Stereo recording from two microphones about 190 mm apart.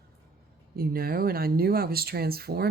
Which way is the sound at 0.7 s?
50° right (ahead or behind).